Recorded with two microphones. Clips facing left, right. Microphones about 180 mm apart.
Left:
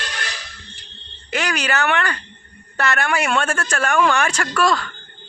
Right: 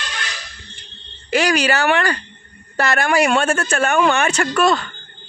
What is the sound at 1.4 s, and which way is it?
Speech, 30° right (ahead or behind).